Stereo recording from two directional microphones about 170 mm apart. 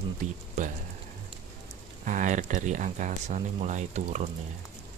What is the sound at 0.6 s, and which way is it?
Speech, 45° right (ahead or behind).